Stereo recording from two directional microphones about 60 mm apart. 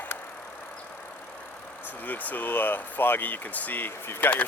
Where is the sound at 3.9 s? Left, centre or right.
Left.